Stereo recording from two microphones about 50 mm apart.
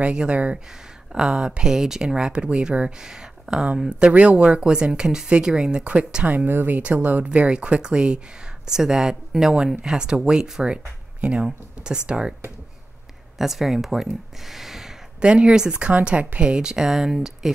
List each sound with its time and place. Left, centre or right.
0.0 s speech: right
4.0 s speech: right
6.3 s speech: right
6.8 s speech: right
7.2 s speech: right
13.4 s speech: centre
14.5 s a sound: centre
15.1 s speech: right
15.9 s speech: right; by 17.5 s centre